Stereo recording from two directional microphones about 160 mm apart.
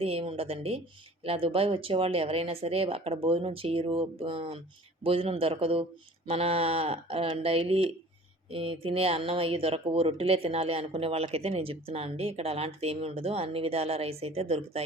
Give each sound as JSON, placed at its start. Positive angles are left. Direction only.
{"t": 0.0, "sound": "speech", "side_deg": -35}